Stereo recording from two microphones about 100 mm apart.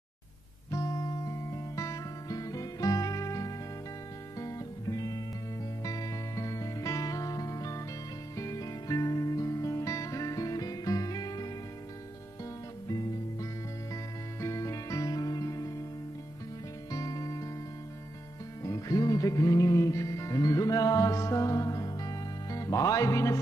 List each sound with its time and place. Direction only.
0.7 s music: 35° left (ahead or behind)
12.8 s music: 35° left (ahead or behind)
16.9 s music: 35° left (ahead or behind)
18.6 s music: 35° left (ahead or behind)